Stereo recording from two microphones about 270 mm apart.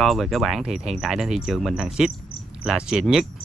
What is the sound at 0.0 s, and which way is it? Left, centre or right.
Speech, centre.